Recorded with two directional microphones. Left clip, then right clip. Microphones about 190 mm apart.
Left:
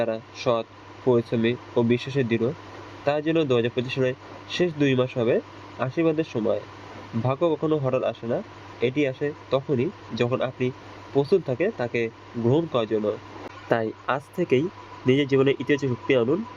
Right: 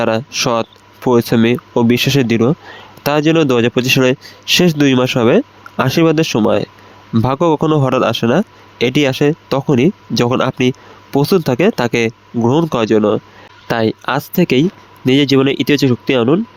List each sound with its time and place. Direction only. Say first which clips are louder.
0.0 s speech: right 10 dB; 70° right (ahead or behind)